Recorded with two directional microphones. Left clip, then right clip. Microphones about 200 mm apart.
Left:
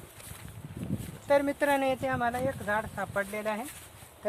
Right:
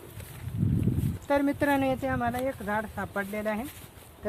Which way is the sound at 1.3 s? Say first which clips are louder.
Even; centre (ahead or behind).